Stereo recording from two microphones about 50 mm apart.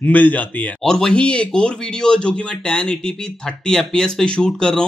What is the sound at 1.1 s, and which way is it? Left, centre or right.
Speech, left.